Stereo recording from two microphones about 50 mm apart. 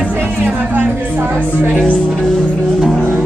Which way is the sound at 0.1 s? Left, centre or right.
Right.